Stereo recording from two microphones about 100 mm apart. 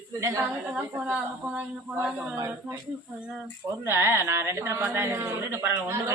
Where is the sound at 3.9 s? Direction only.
25° right (ahead or behind).